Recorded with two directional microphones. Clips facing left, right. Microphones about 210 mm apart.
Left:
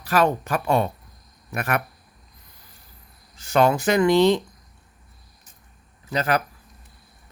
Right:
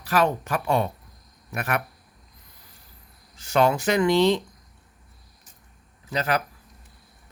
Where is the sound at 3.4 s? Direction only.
45° left (ahead or behind).